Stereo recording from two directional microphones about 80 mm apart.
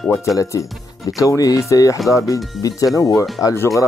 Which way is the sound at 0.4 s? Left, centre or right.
Left.